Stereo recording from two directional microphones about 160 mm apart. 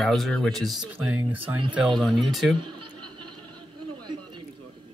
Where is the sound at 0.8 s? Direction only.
10° right (ahead or behind).